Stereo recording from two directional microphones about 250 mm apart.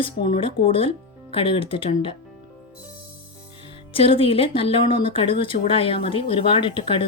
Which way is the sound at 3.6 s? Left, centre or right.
Left.